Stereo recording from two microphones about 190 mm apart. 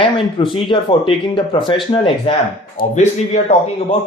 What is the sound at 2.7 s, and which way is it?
Speech, 40° left (ahead or behind).